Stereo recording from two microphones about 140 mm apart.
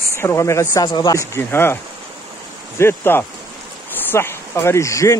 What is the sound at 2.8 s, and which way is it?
Speech, 15° left (ahead or behind).